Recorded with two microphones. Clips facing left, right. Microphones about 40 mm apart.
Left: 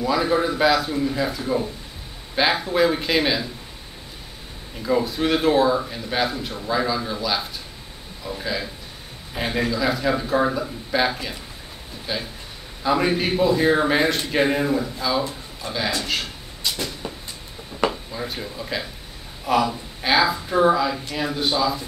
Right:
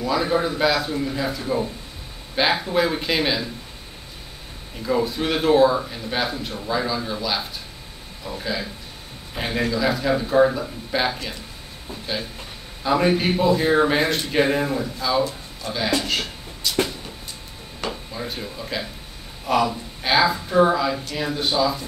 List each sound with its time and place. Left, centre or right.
0.0 s speech: centre
4.8 s speech: centre
15.6 s a man's voice: left
18.1 s speech: centre